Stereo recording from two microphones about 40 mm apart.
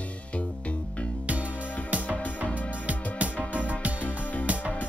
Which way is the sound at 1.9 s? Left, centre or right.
Right.